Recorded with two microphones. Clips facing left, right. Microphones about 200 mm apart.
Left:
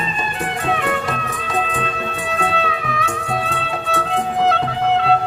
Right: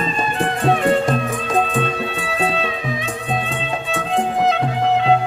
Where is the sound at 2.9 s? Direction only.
20° right (ahead or behind).